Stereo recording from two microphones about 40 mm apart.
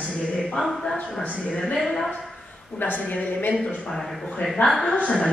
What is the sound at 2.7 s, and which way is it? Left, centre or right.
Speech, left.